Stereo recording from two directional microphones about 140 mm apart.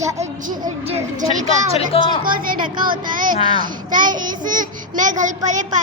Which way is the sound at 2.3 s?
90° right.